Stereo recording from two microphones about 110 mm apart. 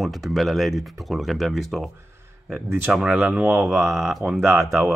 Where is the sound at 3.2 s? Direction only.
20° right (ahead or behind).